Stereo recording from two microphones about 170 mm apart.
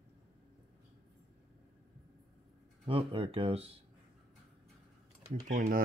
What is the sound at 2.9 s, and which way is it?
Speech, 30° right (ahead or behind).